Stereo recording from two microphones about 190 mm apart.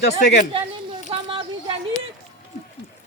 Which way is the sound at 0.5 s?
25° right (ahead or behind).